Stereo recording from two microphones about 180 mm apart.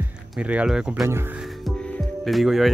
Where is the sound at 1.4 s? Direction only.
Centre (ahead or behind).